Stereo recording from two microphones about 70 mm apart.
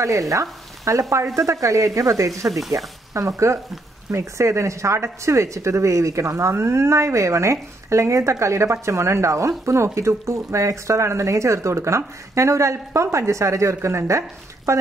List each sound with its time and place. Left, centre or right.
0.3 s frying: right
1.1 s speech: right
2.4 s speech: centre
3.1 s speech: right